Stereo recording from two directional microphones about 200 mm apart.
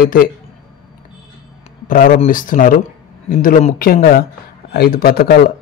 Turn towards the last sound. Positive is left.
turn(degrees=50)  # may be behind; listen again after turning